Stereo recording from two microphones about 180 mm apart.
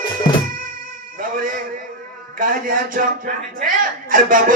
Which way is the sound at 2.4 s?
50° right (ahead or behind).